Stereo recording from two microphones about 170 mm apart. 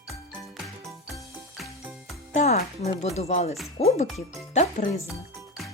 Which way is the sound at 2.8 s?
40° left (ahead or behind).